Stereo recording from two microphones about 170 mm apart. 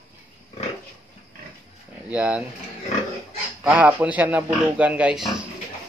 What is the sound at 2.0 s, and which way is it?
Speech, 5° right (ahead or behind).